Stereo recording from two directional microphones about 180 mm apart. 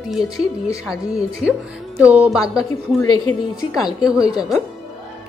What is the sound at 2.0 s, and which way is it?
A woman's voice, 10° right (ahead or behind).